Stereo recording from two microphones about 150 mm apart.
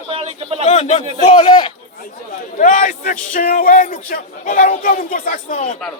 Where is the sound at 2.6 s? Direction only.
55° left (ahead or behind).